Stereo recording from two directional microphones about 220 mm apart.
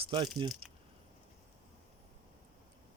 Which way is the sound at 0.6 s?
25° right (ahead or behind).